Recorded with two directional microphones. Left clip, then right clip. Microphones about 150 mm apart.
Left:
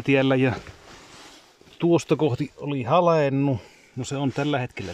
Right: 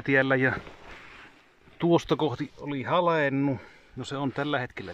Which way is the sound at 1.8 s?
5° left (ahead or behind).